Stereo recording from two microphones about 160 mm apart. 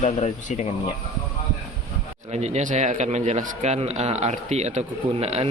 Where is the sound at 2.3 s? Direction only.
45° right (ahead or behind).